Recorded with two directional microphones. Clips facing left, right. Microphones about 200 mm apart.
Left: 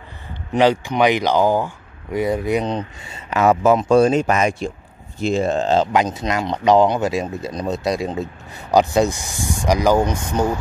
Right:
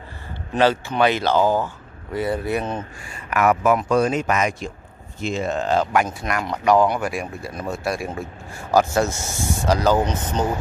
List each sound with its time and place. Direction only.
0.5 s speech: 15° left (ahead or behind)